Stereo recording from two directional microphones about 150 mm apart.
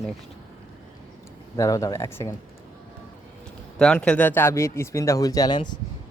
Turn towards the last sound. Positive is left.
turn(degrees=30)  # may be behind; listen again after turning